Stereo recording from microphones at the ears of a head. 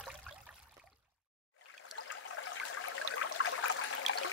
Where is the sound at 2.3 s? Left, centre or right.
Left.